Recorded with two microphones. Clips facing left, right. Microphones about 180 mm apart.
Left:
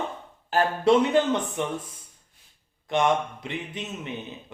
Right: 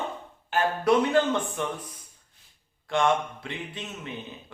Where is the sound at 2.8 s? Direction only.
20° left (ahead or behind).